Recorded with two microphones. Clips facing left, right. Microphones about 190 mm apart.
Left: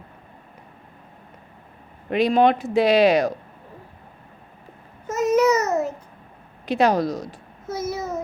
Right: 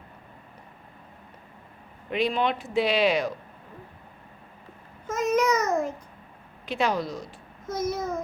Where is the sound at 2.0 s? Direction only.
40° left (ahead or behind).